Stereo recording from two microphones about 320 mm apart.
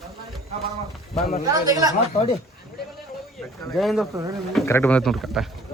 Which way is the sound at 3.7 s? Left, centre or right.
Centre.